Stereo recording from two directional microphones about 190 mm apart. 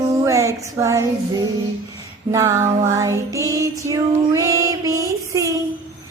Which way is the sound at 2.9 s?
15° right (ahead or behind).